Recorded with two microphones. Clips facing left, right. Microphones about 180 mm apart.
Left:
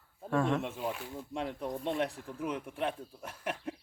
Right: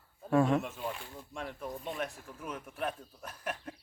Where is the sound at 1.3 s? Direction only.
25° left (ahead or behind).